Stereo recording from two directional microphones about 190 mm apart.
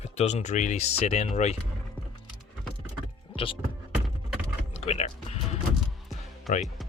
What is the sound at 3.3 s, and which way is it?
Speech, 30° left (ahead or behind).